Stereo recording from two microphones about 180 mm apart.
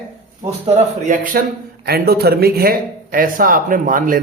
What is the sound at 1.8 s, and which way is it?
Speech, 60° right (ahead or behind).